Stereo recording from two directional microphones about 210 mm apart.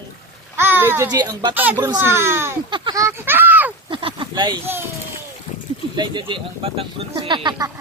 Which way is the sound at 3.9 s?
25° right (ahead or behind).